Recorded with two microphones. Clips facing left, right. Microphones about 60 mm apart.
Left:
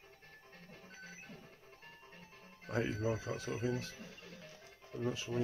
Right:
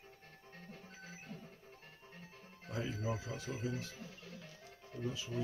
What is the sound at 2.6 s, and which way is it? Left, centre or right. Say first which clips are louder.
Music: left 5 dB; left.